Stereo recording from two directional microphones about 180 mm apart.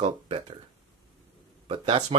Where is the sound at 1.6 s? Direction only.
30° right (ahead or behind).